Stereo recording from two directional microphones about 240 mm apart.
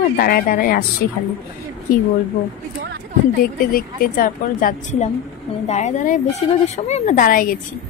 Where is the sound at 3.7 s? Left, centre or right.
Left.